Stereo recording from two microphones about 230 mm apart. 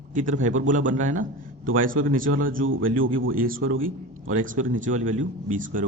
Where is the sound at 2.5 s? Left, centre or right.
Right.